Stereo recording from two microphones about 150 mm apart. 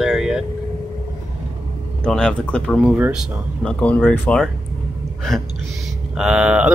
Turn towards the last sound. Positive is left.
turn(degrees=-5)  # may be behind; listen again after turning